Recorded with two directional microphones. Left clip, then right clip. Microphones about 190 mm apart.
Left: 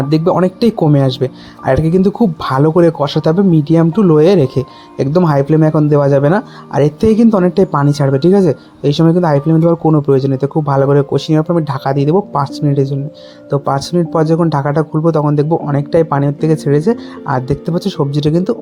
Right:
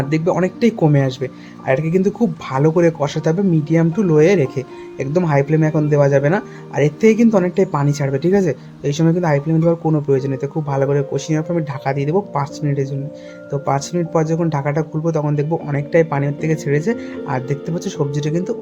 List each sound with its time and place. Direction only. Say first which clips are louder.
0.1 s speech: left 6 dB; 25° left (ahead or behind)